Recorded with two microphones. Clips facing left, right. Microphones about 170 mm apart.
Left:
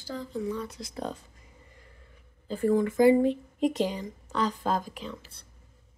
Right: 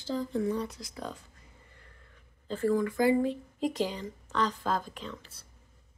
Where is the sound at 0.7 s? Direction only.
25° left (ahead or behind).